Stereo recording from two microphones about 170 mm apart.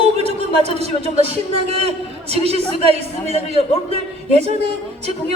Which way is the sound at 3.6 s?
35° left (ahead or behind).